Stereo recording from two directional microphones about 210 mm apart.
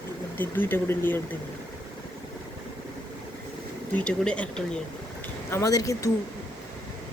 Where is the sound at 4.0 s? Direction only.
5° left (ahead or behind).